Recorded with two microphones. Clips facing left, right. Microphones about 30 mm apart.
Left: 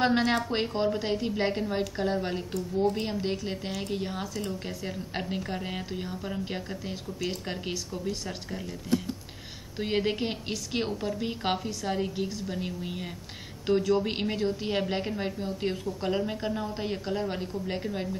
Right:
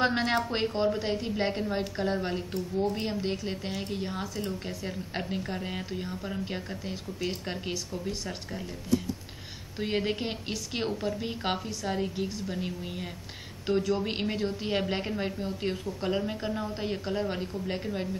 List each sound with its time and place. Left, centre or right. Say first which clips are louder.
0.0 s a woman's voice: left 1 dB; centre
9.8 s a woman's voice: left 2 dB; centre